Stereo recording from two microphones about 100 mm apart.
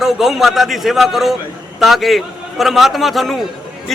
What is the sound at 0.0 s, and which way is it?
A man's voice, 5° right (ahead or behind).